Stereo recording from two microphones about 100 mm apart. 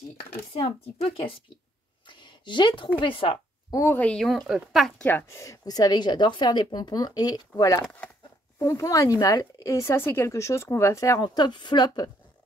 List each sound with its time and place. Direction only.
0.6 s speech: 85° left; by 1.4 s 65° left (ahead or behind)
2.0 s a sound: 50° left (ahead or behind)
3.0 s speech: 60° left (ahead or behind)
3.9 s speech: 15° left (ahead or behind)
4.2 s speech: centre (ahead or behind)
5.0 s speech: 20° left (ahead or behind)
5.4 s a woman's voice: 35° left (ahead or behind)
11.2 s a woman's voice: 45° left (ahead or behind)